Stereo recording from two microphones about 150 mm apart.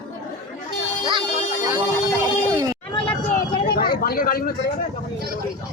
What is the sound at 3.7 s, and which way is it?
Speech, 85° left.